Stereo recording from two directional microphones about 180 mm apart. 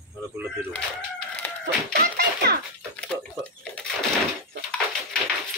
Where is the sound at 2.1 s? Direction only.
60° right (ahead or behind).